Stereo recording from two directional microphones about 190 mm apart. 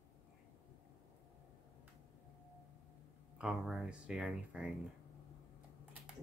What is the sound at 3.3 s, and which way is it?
Speech, centre (ahead or behind).